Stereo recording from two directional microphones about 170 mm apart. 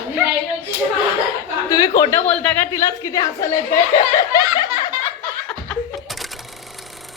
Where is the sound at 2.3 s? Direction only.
10° left (ahead or behind).